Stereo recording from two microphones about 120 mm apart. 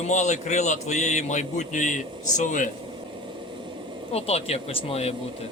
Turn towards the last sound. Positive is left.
turn(degrees=55)  # may be behind; listen again after turning